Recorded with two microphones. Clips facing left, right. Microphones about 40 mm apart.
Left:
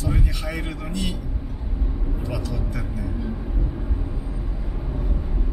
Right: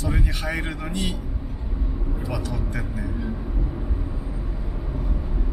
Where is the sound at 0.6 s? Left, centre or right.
Right.